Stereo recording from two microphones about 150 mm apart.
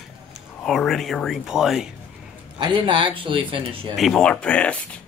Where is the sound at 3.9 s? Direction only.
Centre (ahead or behind).